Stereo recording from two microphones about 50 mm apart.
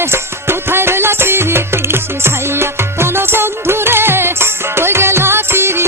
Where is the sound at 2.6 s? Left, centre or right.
Right.